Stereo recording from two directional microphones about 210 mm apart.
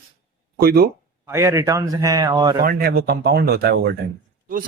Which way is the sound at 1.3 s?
15° right (ahead or behind).